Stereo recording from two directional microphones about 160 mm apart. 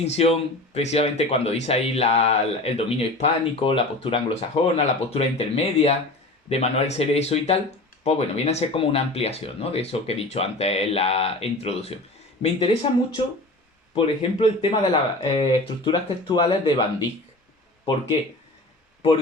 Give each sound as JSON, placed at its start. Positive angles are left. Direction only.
{"t": 0.0, "sound": "speech", "side_deg": 40}